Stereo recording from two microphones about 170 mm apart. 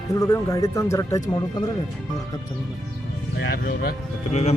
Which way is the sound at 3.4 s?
65° left (ahead or behind).